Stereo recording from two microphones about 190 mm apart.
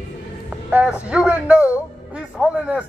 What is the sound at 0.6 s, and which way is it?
A man's voice, 5° right (ahead or behind).